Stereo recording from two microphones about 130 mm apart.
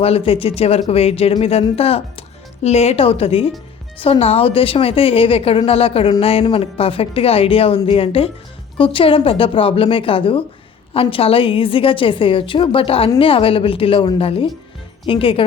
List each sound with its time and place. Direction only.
0.0 s a woman's voice: 45° left (ahead or behind)